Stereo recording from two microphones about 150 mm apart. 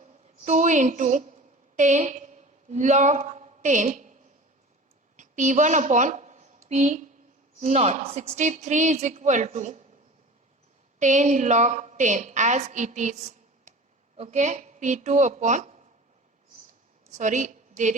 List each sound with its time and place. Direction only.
0.4 s a woman's voice: 55° right (ahead or behind)
11.0 s a woman's voice: 55° right (ahead or behind)
17.1 s a woman's voice: 55° right (ahead or behind)